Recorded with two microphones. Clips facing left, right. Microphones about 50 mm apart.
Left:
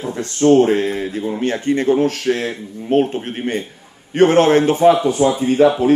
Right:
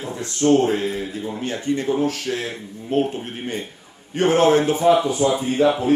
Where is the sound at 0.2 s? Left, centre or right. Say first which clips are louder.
Left 5 dB; left.